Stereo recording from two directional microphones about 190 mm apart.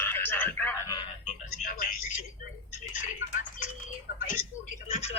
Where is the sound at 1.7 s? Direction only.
45° left (ahead or behind).